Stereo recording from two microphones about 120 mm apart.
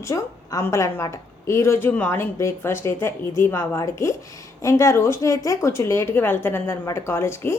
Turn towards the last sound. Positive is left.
turn(degrees=20)  # may be behind; listen again after turning